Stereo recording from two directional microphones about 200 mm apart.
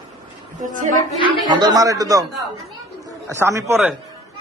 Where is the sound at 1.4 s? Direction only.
20° right (ahead or behind).